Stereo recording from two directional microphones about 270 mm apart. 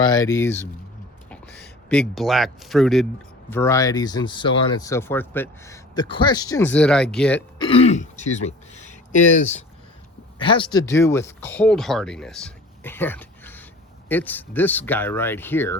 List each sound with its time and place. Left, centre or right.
0.0 s speech: centre
7.6 s speech: left